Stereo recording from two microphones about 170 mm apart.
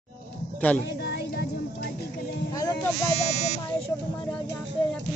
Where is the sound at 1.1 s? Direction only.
70° left (ahead or behind).